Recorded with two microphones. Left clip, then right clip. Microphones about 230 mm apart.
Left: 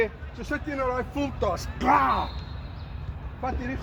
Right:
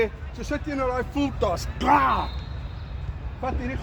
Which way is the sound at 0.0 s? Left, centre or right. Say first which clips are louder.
Right 1 dB; right.